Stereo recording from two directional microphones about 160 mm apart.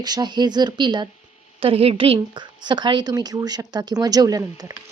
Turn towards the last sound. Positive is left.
turn(degrees=-25)  # may be behind; listen again after turning